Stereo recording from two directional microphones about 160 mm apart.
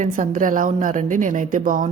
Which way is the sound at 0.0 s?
50° right (ahead or behind).